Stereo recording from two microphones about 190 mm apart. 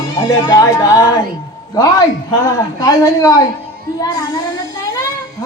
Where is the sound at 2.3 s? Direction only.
15° left (ahead or behind).